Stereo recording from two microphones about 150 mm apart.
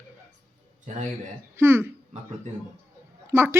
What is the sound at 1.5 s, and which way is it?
Speech, 15° right (ahead or behind).